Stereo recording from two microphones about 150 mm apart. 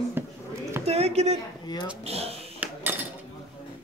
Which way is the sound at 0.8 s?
45° right (ahead or behind).